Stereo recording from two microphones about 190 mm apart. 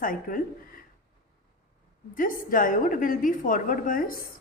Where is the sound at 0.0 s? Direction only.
45° left (ahead or behind).